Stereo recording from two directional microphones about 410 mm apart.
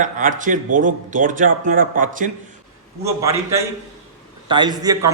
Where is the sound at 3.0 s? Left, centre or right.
Centre.